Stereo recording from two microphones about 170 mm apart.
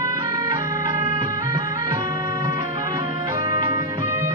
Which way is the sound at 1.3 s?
25° right (ahead or behind).